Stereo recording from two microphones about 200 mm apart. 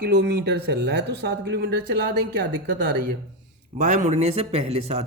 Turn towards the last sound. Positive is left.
turn(degrees=-30)  # may be behind; listen again after turning